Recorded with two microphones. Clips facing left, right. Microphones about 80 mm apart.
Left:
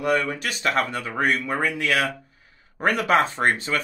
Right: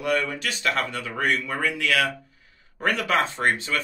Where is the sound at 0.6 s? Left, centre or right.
Left.